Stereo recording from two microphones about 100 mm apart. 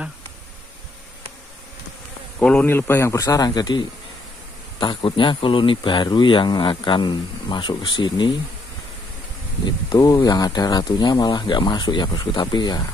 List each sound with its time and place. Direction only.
2.6 s a man's voice: 20° left (ahead or behind); by 3.8 s 45° left (ahead or behind)
4.7 s speech: 55° left (ahead or behind)
9.8 s speech: 40° left (ahead or behind)